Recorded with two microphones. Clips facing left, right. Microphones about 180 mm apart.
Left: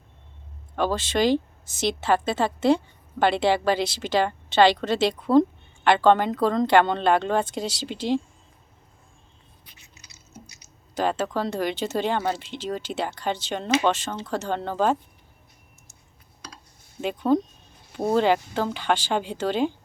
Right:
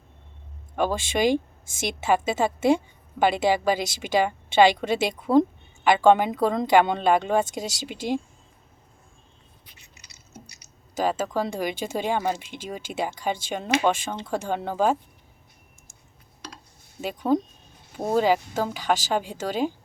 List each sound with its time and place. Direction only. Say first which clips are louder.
0.8 s a woman's voice: even; 10° right (ahead or behind)
1.3 s a woman's voice: left 1 dB; 50° right (ahead or behind)
1.9 s a woman's voice: even; 10° right (ahead or behind)
7.5 s speech: left 2 dB; 45° right (ahead or behind)
10.9 s a woman's voice: even; 10° right (ahead or behind)
17.0 s a woman's voice: left 2 dB; 5° right (ahead or behind)